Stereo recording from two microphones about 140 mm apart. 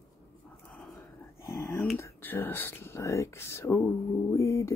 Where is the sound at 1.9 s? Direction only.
15° left (ahead or behind).